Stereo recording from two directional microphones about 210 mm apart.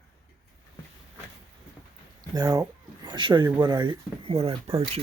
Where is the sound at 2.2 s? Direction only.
20° right (ahead or behind).